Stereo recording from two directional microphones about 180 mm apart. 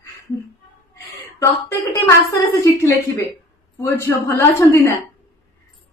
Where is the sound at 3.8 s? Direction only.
15° left (ahead or behind).